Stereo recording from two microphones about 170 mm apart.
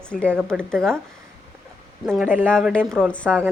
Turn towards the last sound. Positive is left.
turn(degrees=5)  # may be behind; listen again after turning